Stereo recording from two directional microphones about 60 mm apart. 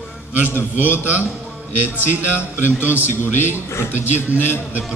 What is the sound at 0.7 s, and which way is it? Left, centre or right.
A man's voice, right.